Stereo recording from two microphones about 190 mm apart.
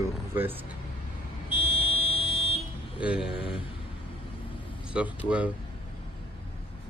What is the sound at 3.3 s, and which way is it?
Speech, 30° left (ahead or behind).